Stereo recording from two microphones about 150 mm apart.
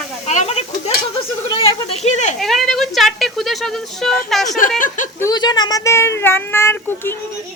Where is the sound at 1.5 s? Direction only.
40° left (ahead or behind).